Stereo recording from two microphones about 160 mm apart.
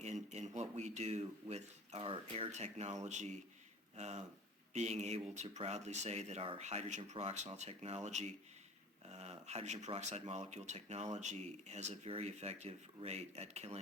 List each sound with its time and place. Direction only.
0.0 s speech: 45° right (ahead or behind)